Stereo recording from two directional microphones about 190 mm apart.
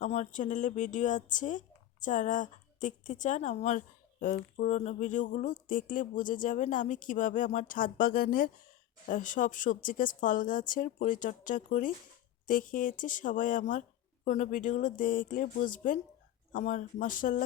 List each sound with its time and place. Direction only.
0.0 s speech: 40° left (ahead or behind)